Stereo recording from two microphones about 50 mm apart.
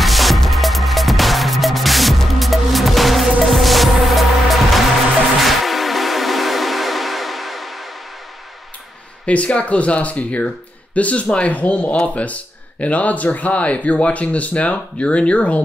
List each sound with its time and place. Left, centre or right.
0.0 s music: centre
9.2 s speech: left